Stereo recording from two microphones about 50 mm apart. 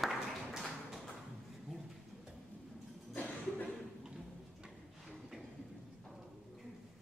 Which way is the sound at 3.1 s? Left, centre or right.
Left.